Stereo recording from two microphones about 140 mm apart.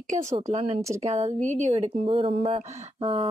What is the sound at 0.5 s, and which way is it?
A woman's voice, 50° right (ahead or behind).